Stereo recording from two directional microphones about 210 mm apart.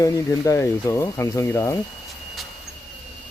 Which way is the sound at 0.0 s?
15° left (ahead or behind).